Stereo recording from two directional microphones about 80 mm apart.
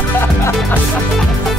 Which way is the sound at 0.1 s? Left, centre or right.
Left.